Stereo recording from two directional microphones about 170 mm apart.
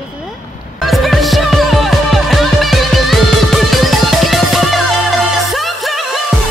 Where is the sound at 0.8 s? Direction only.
Centre (ahead or behind).